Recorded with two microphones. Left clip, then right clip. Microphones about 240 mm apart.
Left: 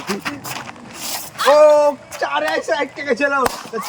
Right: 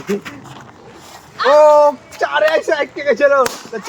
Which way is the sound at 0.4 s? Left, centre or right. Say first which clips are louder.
Left 7 dB; left.